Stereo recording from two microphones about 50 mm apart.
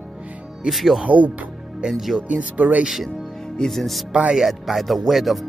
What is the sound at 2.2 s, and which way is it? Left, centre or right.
Speech, right.